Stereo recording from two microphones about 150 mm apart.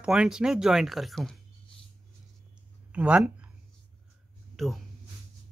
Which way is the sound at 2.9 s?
10° right (ahead or behind).